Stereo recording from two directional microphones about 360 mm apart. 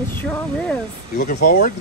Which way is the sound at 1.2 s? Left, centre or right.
Left.